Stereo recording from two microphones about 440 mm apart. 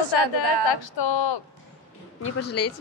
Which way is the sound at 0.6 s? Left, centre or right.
Left.